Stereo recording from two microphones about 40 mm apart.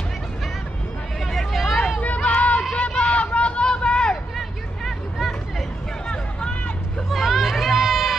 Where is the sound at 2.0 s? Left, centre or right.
Left.